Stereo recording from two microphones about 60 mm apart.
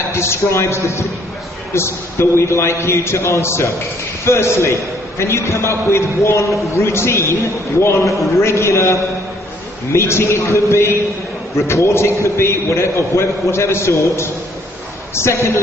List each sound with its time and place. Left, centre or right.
0.1 s a man's voice: left